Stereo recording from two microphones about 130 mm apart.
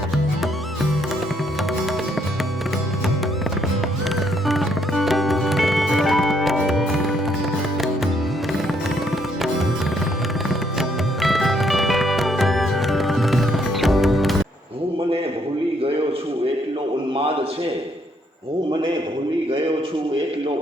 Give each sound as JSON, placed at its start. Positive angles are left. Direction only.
{"t": 4.4, "sound": "music", "side_deg": 0}
{"t": 10.5, "sound": "music", "side_deg": 0}